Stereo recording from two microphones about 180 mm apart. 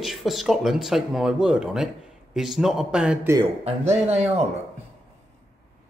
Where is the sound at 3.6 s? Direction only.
35° right (ahead or behind).